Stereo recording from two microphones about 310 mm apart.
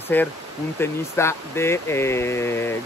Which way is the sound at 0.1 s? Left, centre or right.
Centre.